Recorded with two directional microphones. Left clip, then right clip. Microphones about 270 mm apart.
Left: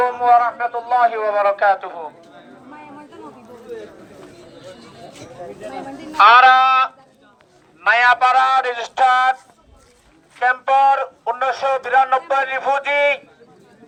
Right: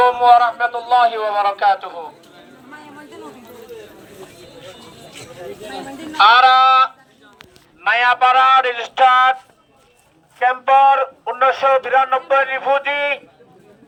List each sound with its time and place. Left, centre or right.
0.0 s speech: centre
6.1 s a man's voice: centre
10.4 s a man's voice: left